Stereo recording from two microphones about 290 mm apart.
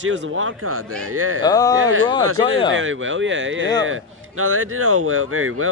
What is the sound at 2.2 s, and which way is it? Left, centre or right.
Speech, right.